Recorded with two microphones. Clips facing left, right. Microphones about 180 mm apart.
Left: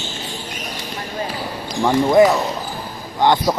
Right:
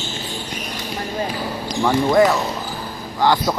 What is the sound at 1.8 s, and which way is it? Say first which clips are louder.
Speech: left 2 dB; 10° left (ahead or behind).